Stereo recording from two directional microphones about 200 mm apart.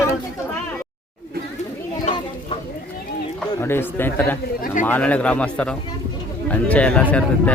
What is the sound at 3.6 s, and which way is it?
A man's voice, 10° left (ahead or behind).